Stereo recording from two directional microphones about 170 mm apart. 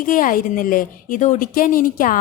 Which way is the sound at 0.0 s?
55° left (ahead or behind).